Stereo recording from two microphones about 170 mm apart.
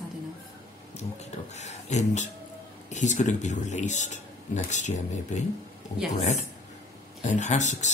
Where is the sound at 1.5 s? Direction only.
45° left (ahead or behind).